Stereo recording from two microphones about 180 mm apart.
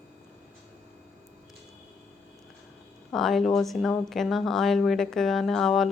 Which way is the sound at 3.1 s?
Centre (ahead or behind).